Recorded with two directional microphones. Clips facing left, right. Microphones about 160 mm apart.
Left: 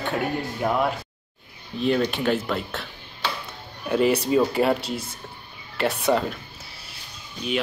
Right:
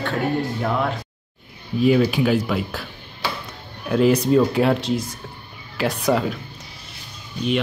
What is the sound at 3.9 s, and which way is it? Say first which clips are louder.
Speech: right 4 dB; 5° left (ahead or behind).